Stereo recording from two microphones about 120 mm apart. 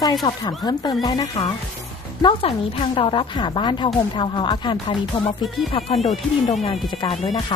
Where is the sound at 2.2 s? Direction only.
50° left (ahead or behind).